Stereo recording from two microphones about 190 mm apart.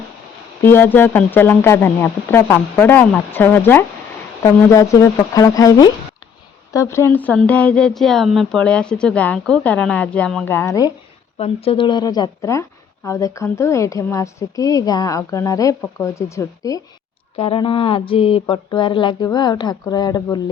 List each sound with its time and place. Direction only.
0.6 s speech: 10° left (ahead or behind)
11.3 s speech: 30° left (ahead or behind)
17.3 s a sound: 30° left (ahead or behind)